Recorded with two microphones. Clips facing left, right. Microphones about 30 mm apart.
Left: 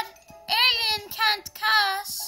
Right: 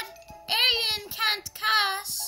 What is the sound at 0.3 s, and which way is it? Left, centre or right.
Music, centre.